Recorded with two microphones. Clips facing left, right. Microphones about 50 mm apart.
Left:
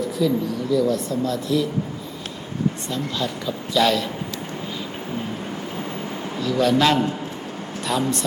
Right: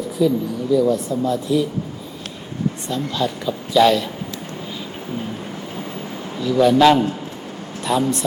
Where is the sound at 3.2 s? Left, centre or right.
Centre.